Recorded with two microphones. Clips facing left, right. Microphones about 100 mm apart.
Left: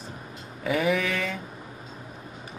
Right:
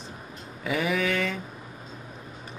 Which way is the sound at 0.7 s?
Centre (ahead or behind).